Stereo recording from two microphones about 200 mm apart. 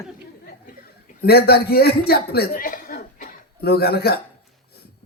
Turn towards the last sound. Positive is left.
turn(degrees=55)  # may be behind; listen again after turning